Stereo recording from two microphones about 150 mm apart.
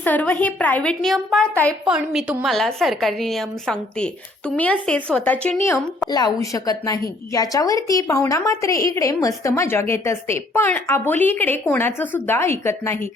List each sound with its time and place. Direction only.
0.0 s a woman's voice: 10° left (ahead or behind)
6.1 s a woman's voice: 25° left (ahead or behind)